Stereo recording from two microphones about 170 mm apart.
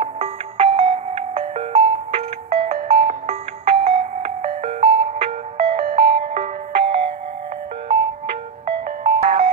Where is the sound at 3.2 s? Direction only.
40° right (ahead or behind).